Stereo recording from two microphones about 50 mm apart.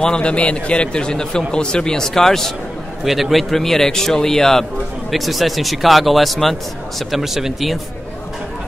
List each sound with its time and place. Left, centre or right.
0.0 s a man's voice: centre
3.1 s a man's voice: centre